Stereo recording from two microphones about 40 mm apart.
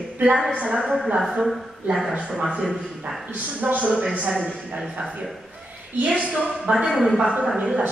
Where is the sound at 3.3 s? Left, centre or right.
Right.